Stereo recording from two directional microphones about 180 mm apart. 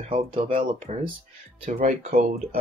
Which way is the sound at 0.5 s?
40° right (ahead or behind).